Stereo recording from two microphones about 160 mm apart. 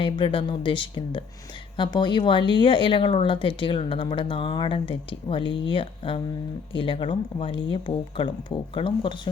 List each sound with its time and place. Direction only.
0.0 s speech: 30° left (ahead or behind)